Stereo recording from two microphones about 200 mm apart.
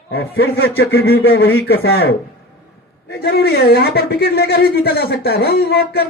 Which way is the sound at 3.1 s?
55° left (ahead or behind).